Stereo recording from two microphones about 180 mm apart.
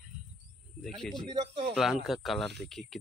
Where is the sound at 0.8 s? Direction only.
Centre (ahead or behind).